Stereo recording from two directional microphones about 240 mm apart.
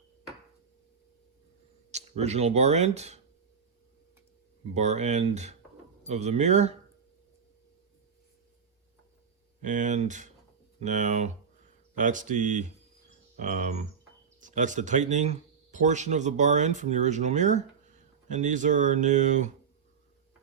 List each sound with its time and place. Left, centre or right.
1.9 s speech: right
4.7 s speech: right
9.6 s speech: right